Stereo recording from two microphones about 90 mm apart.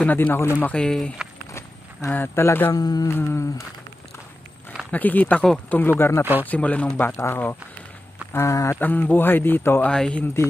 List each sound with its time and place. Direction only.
0.0 s a man's voice: 20° left (ahead or behind)
0.7 s speech: 10° left (ahead or behind)
1.5 s walk: 35° left (ahead or behind)
2.1 s a man's voice: 25° left (ahead or behind)
2.7 s mantra: 45° left (ahead or behind)
3.1 s a man's voice: 25° left (ahead or behind)
4.9 s a man's voice: 20° left (ahead or behind)
5.4 s speech: 10° left (ahead or behind)
5.8 s a man's voice: 25° left (ahead or behind)
8.7 s a man's voice: 20° left (ahead or behind)
9.8 s speech: 10° left (ahead or behind)